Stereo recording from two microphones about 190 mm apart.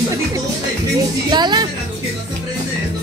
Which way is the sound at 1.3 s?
20° right (ahead or behind).